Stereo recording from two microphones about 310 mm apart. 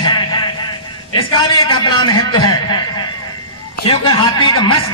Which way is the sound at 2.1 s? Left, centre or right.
Left.